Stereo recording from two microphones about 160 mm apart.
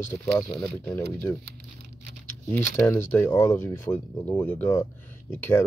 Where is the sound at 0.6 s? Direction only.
Centre (ahead or behind).